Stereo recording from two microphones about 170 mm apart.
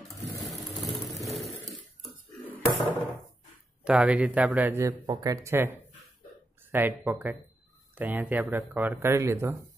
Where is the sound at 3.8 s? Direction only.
5° right (ahead or behind).